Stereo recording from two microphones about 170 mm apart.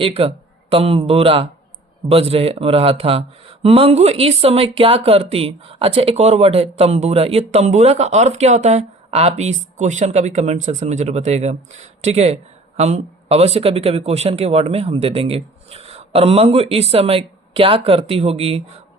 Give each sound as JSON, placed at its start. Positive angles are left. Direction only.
{"t": 0.0, "sound": "speech", "side_deg": -35}